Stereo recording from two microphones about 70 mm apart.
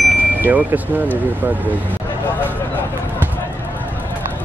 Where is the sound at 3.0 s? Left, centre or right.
Right.